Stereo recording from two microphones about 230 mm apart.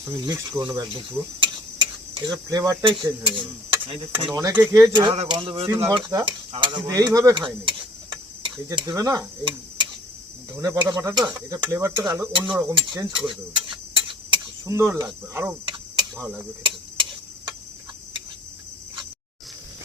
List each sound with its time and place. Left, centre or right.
0.3 s speech: centre
4.3 s speech: centre
5.6 s speech: centre
12.7 s speech: centre
13.2 s clock: right
14.6 s speech: centre
16.6 s tick-tock: right